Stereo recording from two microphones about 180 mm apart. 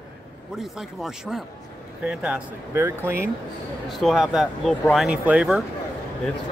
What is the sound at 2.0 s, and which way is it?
Speech, 5° right (ahead or behind).